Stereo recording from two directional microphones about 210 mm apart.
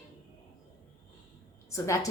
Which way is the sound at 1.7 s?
15° left (ahead or behind).